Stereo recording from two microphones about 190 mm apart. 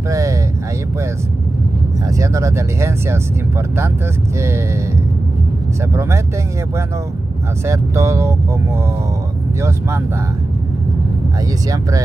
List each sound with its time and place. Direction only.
0.1 s speech: 15° right (ahead or behind)
2.0 s speech: 15° right (ahead or behind)
5.9 s speech: 15° right (ahead or behind)
7.6 s speech: 15° right (ahead or behind)